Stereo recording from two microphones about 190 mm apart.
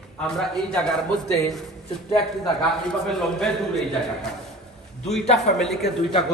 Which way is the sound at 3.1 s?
Centre (ahead or behind).